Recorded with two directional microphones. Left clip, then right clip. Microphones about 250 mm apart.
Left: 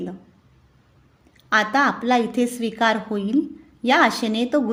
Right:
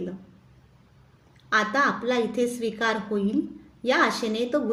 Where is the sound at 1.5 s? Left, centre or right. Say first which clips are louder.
Left 4 dB; left.